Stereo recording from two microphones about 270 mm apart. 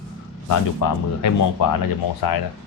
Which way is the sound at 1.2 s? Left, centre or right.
Left.